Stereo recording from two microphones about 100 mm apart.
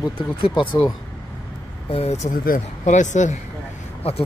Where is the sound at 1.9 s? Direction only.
85° left.